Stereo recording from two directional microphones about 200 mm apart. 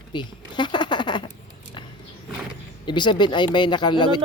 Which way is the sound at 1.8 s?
25° left (ahead or behind).